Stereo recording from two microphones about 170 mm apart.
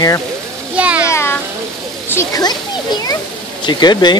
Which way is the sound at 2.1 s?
20° left (ahead or behind).